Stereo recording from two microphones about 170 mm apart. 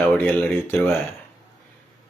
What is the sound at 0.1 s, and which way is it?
Speech, 10° left (ahead or behind).